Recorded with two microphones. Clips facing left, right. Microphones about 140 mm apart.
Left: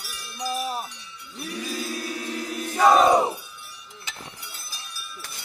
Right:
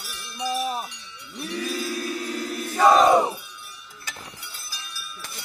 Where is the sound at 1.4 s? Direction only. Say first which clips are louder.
Right 3 dB; 5° left (ahead or behind).